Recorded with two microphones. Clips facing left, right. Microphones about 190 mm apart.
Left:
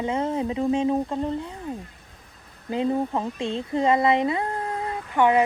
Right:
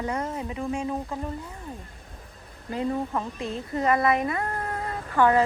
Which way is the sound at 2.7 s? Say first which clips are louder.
Left 4 dB; 25° left (ahead or behind).